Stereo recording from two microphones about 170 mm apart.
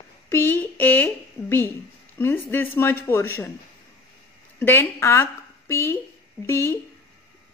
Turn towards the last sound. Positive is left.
turn(degrees=15)  # may be behind; listen again after turning